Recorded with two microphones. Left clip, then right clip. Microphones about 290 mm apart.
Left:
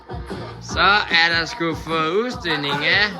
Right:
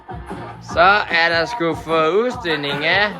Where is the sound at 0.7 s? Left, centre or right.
Centre.